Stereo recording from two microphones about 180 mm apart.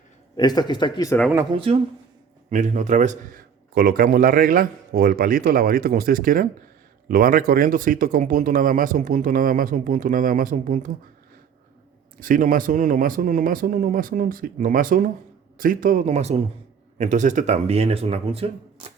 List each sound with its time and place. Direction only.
0.3 s speech: 25° left (ahead or behind)
1.5 s speech: 30° right (ahead or behind)
2.5 s a man's voice: 45° right (ahead or behind)
12.2 s a man's voice: 50° right (ahead or behind); by 18.9 s 30° right (ahead or behind)